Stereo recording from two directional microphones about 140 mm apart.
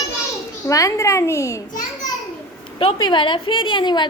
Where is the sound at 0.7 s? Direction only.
25° left (ahead or behind).